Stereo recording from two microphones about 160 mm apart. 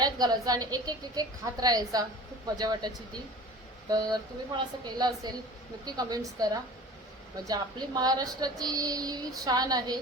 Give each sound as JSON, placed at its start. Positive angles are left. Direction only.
{"t": 0.0, "sound": "speech", "side_deg": -25}